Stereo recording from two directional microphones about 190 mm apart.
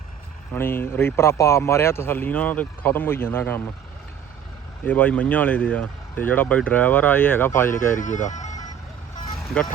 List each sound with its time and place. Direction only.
0.5 s speech: 10° left (ahead or behind)
4.9 s speech: 10° left (ahead or behind)
7.9 s speech: 40° left (ahead or behind)